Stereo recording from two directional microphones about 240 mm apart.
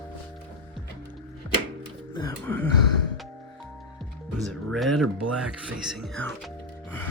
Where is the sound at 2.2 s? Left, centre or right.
Centre.